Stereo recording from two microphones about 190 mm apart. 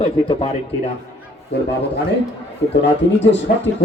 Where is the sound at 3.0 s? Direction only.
70° left (ahead or behind).